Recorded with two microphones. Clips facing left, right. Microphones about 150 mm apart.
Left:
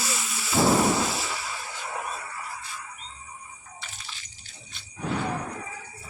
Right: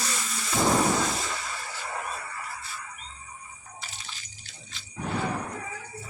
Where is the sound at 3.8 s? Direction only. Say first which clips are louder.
Right 1 dB; 40° right (ahead or behind).